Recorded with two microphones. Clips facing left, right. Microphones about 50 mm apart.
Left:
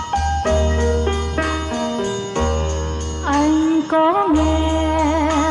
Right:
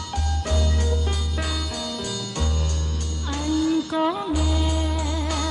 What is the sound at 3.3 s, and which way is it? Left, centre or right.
Music, left.